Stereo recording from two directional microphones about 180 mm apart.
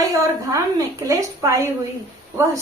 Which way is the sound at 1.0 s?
15° right (ahead or behind).